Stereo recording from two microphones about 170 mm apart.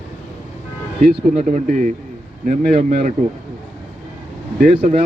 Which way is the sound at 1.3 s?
45° right (ahead or behind).